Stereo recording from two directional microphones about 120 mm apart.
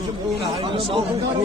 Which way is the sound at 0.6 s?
50° right (ahead or behind).